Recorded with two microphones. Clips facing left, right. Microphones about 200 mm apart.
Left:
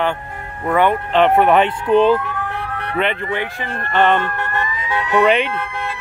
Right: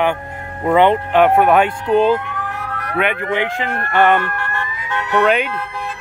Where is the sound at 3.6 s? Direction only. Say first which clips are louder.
Right 4 dB; 65° right (ahead or behind).